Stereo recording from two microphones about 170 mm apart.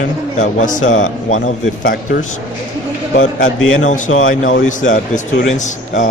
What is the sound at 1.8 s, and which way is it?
A man's voice, 55° left (ahead or behind).